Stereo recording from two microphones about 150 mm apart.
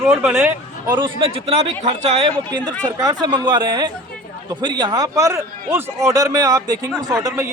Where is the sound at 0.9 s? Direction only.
35° right (ahead or behind).